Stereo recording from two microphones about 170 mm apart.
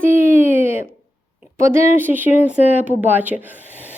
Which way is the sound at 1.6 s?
15° right (ahead or behind).